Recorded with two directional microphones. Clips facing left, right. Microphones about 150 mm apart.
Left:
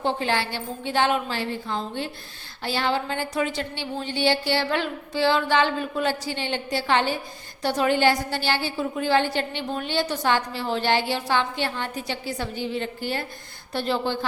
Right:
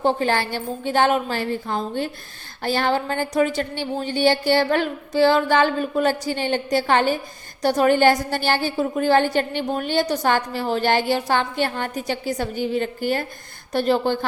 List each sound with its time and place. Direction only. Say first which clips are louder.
0.0 s a woman's voice: right 4 dB; 45° right (ahead or behind)